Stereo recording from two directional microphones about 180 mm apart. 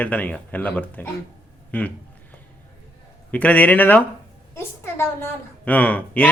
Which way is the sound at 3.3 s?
10° left (ahead or behind).